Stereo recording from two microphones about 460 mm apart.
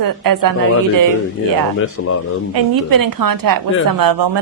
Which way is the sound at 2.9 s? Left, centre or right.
Right.